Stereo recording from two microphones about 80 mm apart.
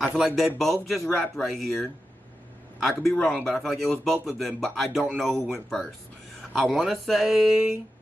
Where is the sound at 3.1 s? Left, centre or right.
Centre.